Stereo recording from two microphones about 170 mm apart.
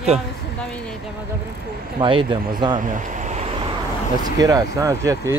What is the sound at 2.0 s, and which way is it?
Speech, 30° right (ahead or behind).